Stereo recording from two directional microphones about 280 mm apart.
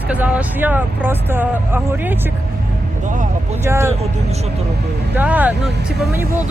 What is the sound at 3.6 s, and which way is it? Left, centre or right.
Speech, centre.